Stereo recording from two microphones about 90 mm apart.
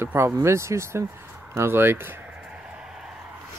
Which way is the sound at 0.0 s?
30° right (ahead or behind).